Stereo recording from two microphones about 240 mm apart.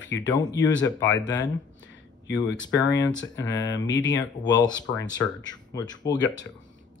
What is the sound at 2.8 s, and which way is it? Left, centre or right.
Speech, left.